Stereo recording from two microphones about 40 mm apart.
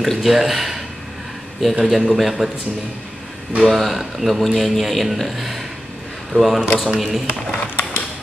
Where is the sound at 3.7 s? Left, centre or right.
Centre.